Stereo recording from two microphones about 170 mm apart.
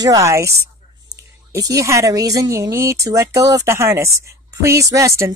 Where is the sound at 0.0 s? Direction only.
20° right (ahead or behind).